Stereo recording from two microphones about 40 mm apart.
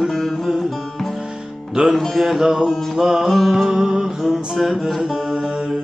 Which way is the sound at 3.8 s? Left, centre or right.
Centre.